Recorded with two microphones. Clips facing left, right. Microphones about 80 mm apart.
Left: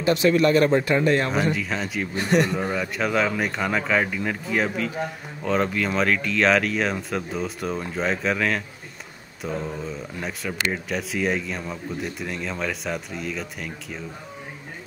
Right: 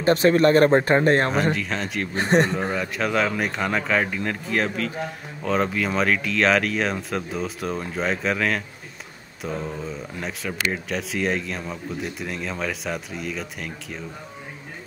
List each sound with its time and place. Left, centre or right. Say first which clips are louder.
0.0 s speech: right 2 dB; right
1.3 s speech: right 1 dB; centre
2.1 s speech: right 2 dB; right
2.7 s speech: even; centre